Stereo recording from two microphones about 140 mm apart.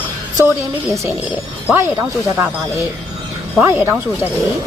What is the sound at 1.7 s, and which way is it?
Speech, 10° right (ahead or behind).